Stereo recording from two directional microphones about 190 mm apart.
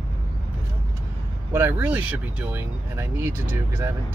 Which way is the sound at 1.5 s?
10° right (ahead or behind).